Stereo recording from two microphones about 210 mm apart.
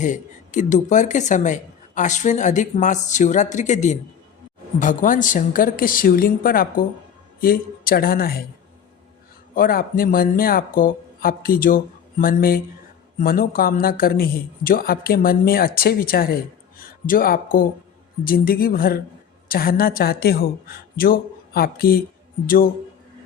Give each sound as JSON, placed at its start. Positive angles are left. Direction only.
{"t": 0.0, "sound": "a woman's voice", "side_deg": 35}
{"t": 9.6, "sound": "a woman's voice", "side_deg": 45}